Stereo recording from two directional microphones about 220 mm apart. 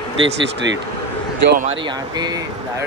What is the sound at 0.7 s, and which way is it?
Speech, 55° right (ahead or behind).